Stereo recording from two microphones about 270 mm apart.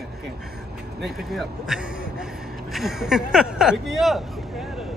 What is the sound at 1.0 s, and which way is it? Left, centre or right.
Speech, centre.